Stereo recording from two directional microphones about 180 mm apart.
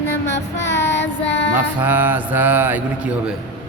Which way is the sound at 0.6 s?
80° left.